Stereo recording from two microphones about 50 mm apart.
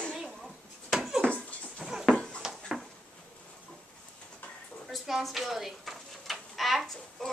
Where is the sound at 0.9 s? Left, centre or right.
Centre.